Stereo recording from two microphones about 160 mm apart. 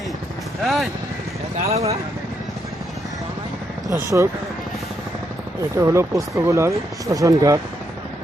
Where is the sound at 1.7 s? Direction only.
40° right (ahead or behind).